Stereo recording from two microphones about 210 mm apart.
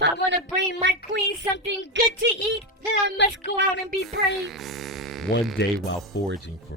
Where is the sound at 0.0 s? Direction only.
55° right (ahead or behind).